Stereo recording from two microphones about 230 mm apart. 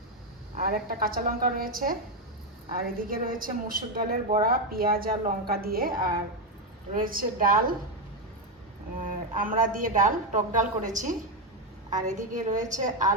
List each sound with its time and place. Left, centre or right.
0.5 s a woman's voice: right
3.0 s a woman's voice: right
9.3 s a woman's voice: right